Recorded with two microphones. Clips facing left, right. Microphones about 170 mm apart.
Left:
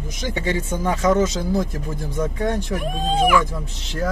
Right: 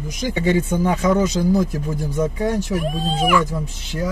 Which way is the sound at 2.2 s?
5° right (ahead or behind).